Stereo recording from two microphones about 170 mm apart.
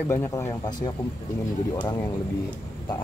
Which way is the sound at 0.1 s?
15° left (ahead or behind).